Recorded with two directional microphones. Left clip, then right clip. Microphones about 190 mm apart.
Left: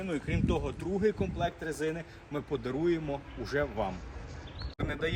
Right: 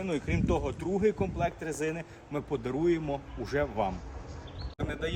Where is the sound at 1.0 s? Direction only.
45° right (ahead or behind).